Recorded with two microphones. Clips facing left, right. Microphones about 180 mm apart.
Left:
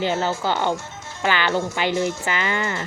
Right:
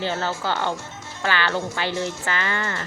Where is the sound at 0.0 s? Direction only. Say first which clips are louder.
Left 3 dB; 20° left (ahead or behind).